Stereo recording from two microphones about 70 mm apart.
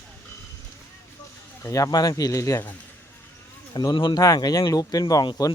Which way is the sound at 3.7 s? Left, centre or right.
Left.